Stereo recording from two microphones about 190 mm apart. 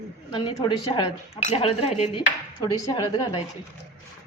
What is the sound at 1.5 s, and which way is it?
Cutlery, 35° left (ahead or behind).